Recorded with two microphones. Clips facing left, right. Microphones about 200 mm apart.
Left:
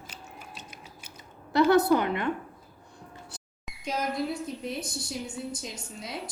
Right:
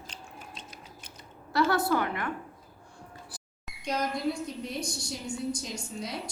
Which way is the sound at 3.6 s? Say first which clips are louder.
Right 1 dB; centre (ahead or behind).